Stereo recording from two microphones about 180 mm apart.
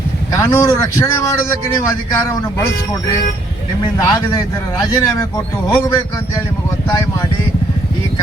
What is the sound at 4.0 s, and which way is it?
Speech, 20° left (ahead or behind).